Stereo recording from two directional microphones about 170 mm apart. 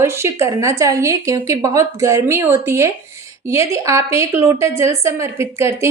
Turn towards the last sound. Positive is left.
turn(degrees=-15)  # may be behind; listen again after turning